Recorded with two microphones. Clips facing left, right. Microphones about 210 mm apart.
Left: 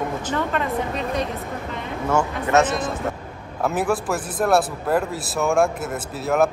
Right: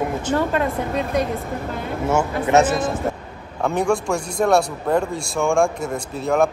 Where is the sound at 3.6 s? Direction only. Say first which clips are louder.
Right 2 dB; 5° left (ahead or behind).